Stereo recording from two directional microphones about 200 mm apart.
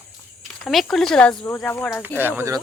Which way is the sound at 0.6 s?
Centre (ahead or behind).